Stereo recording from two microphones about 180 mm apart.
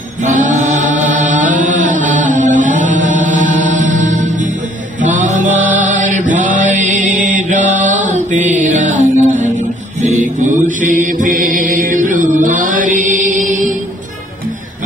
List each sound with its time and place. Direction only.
0.2 s mantra: 45° right (ahead or behind)
2.2 s music: 45° right (ahead or behind)
5.0 s mantra: 45° right (ahead or behind)
8.5 s music: 45° right (ahead or behind)
10.0 s mantra: 45° right (ahead or behind)